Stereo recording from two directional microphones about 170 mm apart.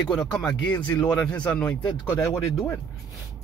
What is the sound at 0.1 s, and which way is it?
Speech, 5° left (ahead or behind).